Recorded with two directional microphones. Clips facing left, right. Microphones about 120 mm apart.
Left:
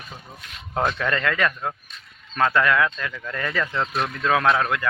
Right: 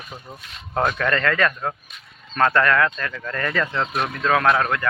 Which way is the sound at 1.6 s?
5° right (ahead or behind).